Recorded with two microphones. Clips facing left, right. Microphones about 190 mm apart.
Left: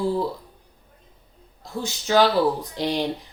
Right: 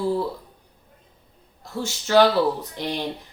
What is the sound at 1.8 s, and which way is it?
A woman's voice, 15° left (ahead or behind).